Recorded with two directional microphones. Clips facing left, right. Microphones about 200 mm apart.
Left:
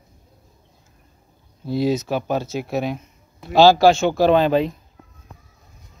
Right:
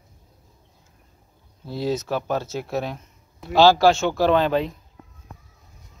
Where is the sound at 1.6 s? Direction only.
15° left (ahead or behind).